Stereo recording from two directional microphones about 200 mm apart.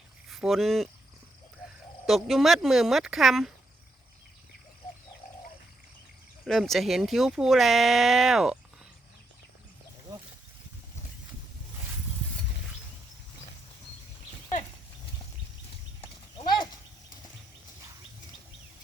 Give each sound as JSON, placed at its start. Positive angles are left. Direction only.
{"t": 0.3, "sound": "speech", "side_deg": 0}
{"t": 2.0, "sound": "speech", "side_deg": 0}
{"t": 6.4, "sound": "speech", "side_deg": 0}